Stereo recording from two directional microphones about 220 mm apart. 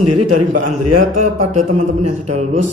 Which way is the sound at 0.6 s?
90° right.